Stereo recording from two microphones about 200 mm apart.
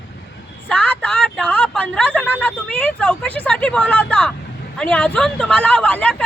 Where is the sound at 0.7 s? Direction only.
5° left (ahead or behind).